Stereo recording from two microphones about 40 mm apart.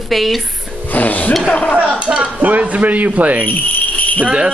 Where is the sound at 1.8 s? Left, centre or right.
Right.